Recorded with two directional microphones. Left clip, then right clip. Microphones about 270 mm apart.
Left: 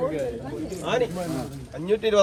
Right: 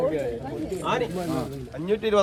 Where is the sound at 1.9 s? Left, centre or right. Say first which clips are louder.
Left 2 dB; centre.